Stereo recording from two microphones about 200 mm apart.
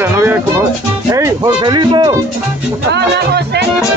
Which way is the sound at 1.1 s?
20° right (ahead or behind).